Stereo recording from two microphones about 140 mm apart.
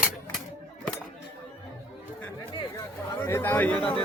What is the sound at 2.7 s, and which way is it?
Chatter, 20° left (ahead or behind).